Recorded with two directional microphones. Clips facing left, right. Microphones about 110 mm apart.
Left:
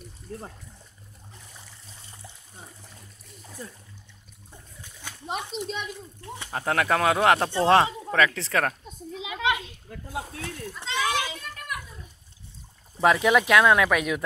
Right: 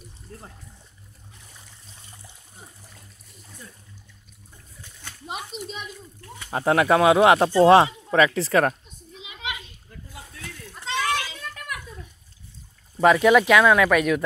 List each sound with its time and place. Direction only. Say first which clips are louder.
5.2 s speech: left 2 dB; 5° right (ahead or behind)
6.2 s speech: left 5 dB; 25° left (ahead or behind)
6.5 s speech: right 5 dB; 15° right (ahead or behind)
9.4 s a sound: left 8 dB; 90° left
10.8 s children playing: right 1 dB; 15° left (ahead or behind)
13.0 s speech: right 4 dB; centre (ahead or behind)